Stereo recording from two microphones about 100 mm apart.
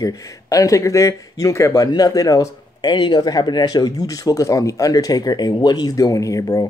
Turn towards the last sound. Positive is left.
turn(degrees=35)  # may be behind; listen again after turning